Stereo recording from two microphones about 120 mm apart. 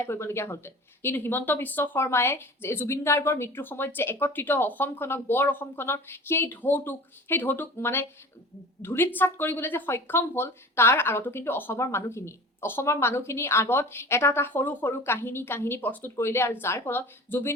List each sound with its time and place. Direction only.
0.0 s a woman's voice: 20° left (ahead or behind)